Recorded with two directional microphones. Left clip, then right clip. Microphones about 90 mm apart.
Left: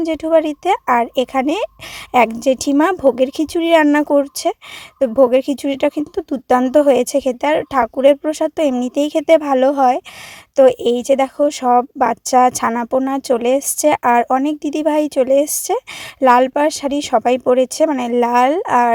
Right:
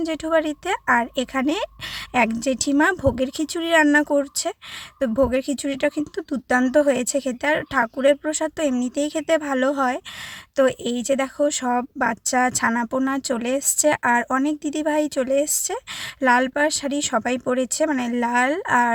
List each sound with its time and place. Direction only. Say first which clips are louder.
0.0 s speech: left 7 dB; 55° left (ahead or behind)
2.4 s speech: left 5 dB; 90° left; by 4.5 s 75° left (ahead or behind)
4.9 s speech: left 8 dB; 60° left (ahead or behind)
10.6 s speech: left 9 dB; 75° left (ahead or behind)
12.7 s speech: left 5 dB; 50° left (ahead or behind)